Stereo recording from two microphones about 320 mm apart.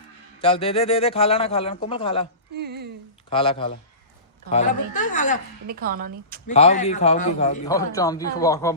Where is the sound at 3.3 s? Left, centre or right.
Centre.